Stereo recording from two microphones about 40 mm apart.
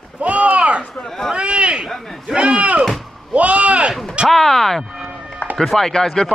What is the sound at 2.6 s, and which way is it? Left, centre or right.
Chop, right.